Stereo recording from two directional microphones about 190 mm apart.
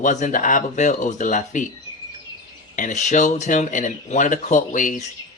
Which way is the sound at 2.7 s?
40° left (ahead or behind).